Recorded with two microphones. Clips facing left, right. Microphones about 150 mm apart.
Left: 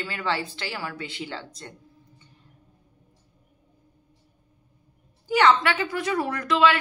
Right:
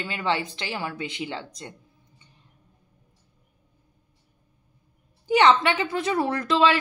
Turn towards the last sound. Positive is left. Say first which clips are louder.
# even
turn(degrees=-30)  # may be behind; listen again after turning